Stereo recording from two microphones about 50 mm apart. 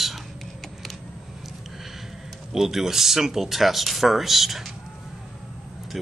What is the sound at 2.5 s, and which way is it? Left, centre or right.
Speech, centre.